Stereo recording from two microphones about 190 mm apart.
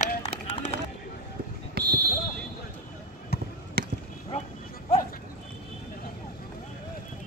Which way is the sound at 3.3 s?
55° left (ahead or behind).